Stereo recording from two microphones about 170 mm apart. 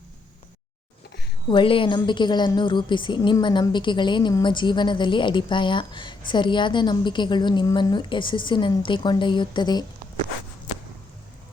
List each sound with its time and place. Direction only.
1.5 s a woman's voice: 30° left (ahead or behind)